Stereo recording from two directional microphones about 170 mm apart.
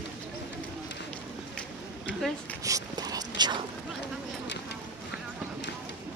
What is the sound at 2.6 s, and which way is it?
Dog, 20° right (ahead or behind).